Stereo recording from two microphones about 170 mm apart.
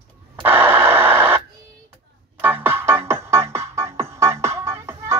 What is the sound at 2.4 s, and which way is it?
Music, 10° right (ahead or behind).